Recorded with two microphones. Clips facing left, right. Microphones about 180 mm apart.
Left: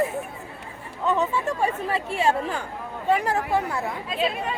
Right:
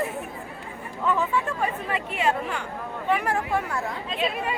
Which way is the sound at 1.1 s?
25° left (ahead or behind).